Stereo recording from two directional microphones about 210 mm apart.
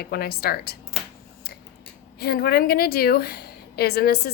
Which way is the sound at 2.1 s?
50° left (ahead or behind).